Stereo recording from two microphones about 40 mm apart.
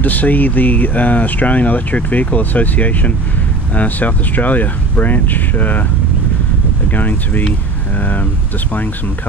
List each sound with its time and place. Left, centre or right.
0.0 s speech: left
6.9 s speech: left